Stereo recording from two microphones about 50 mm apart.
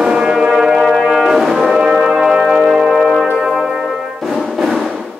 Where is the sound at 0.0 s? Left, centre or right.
Centre.